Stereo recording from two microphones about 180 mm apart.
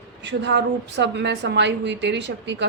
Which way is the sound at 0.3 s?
75° right (ahead or behind).